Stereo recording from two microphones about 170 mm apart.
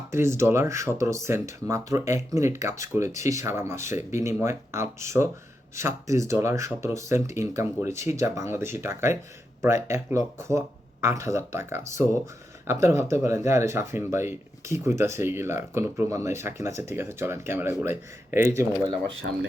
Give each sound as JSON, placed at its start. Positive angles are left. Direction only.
{"t": 0.1, "sound": "speech", "side_deg": -15}
{"t": 19.2, "sound": "speech", "side_deg": -70}